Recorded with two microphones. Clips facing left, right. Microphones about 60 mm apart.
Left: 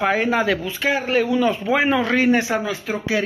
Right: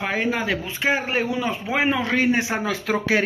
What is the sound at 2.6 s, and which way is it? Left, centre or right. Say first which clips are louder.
Speech: right 1 dB; right.